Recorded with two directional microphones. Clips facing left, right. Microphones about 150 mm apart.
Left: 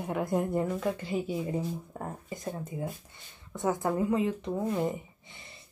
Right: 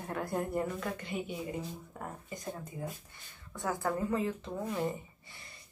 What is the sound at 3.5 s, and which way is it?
Speech, 20° left (ahead or behind).